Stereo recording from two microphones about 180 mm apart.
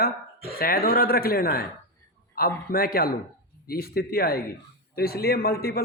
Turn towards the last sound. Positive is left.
turn(degrees=55)  # may be behind; listen again after turning